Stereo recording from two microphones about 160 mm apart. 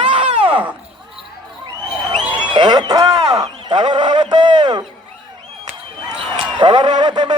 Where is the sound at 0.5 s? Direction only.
10° right (ahead or behind).